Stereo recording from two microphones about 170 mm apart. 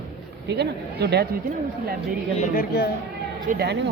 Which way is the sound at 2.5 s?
60° left (ahead or behind).